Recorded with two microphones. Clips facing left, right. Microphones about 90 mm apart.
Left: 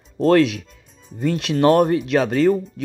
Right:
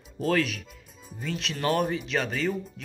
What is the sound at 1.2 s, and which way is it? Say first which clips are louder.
Speech: left 13 dB; 65° left (ahead or behind).